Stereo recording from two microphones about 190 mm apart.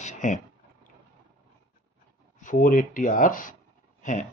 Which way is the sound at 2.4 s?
45° left (ahead or behind).